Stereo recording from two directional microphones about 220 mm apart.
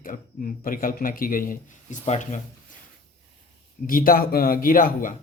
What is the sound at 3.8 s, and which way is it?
Speech, 40° left (ahead or behind).